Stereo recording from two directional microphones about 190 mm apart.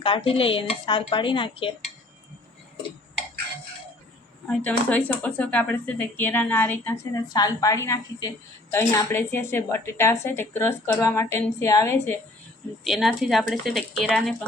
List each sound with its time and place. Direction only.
0.0 s speech: 30° left (ahead or behind)
4.4 s speech: 10° left (ahead or behind)
12.8 s speech: centre (ahead or behind)